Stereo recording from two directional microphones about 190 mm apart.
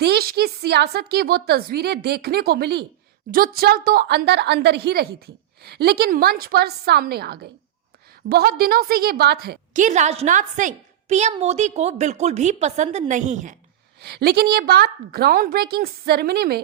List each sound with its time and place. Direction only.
0.0 s a woman's voice: 55° right (ahead or behind)
14.0 s a woman's voice: 60° right (ahead or behind)